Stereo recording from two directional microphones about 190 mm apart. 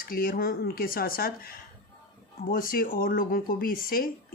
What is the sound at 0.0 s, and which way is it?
Speech, 50° left (ahead or behind).